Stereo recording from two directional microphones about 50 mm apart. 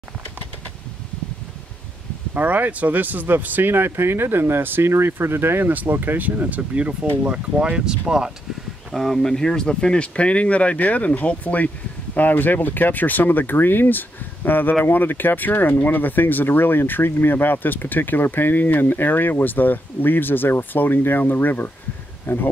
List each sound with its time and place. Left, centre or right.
2.3 s speech: right
5.7 s speech: right
6.8 s speech: right
8.9 s speech: centre; by 22.5 s left